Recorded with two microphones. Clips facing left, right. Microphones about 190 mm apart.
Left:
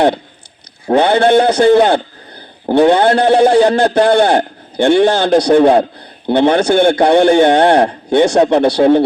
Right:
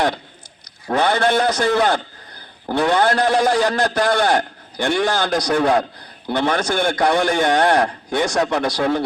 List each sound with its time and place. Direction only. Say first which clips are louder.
0.9 s a man's voice: left 8 dB; 30° left (ahead or behind)